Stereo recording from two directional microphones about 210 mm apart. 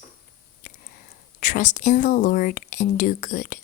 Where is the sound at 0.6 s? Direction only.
40° left (ahead or behind).